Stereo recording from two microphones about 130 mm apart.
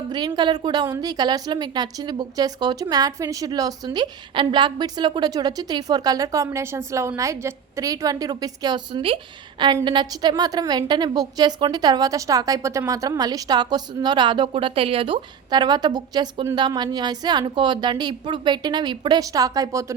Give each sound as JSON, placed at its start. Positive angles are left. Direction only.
{"t": 0.1, "sound": "a woman's voice", "side_deg": -35}
{"t": 9.0, "sound": "a woman's voice", "side_deg": -45}